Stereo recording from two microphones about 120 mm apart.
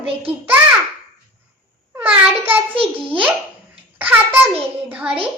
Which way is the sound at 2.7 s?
50° right (ahead or behind).